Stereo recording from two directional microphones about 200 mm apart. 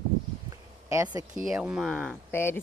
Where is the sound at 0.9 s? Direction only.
15° right (ahead or behind); by 2.6 s 10° left (ahead or behind).